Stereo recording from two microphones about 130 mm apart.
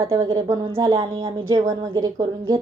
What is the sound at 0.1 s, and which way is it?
A woman's voice, 25° right (ahead or behind).